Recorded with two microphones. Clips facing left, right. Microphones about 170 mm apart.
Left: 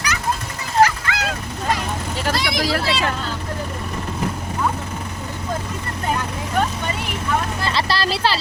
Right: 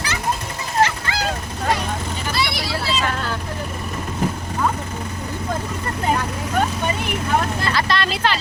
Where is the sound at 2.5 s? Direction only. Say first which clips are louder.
Left 3 dB; 90° left.